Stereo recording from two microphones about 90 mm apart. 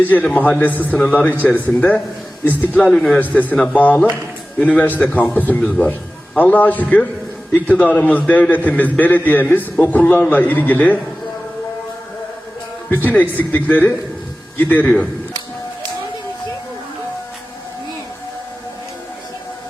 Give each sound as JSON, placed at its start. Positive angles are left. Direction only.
{"t": 0.0, "sound": "a man's voice", "side_deg": 20}
{"t": 2.9, "sound": "a man's voice", "side_deg": 5}
{"t": 3.2, "sound": "a man's voice", "side_deg": 20}
{"t": 12.9, "sound": "a man's voice", "side_deg": 20}